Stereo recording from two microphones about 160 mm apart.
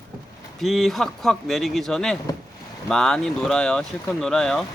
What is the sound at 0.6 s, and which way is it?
Speech, centre (ahead or behind).